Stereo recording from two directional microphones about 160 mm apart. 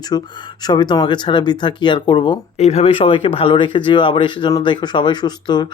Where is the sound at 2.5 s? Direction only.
45° left (ahead or behind).